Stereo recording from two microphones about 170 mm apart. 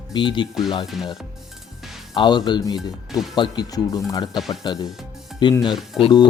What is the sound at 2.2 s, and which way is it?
Speech, 25° left (ahead or behind).